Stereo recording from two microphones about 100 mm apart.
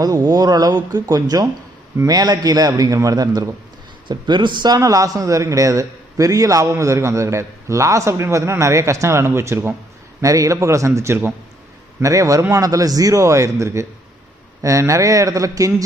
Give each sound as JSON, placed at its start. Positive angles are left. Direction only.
{"t": 0.0, "sound": "a man's voice", "side_deg": -40}
{"t": 4.8, "sound": "a man's voice", "side_deg": -35}